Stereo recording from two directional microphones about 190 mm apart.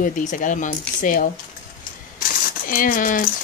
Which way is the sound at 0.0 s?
40° left (ahead or behind).